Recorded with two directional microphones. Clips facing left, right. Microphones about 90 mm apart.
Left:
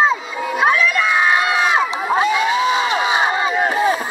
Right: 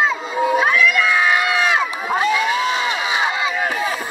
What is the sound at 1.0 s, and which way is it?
Crowd, 20° left (ahead or behind).